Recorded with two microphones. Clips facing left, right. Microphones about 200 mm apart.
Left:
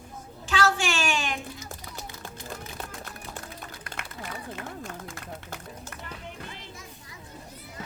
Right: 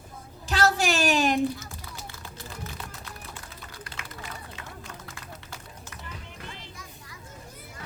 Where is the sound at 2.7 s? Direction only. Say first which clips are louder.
Left 2 dB; 50° left (ahead or behind).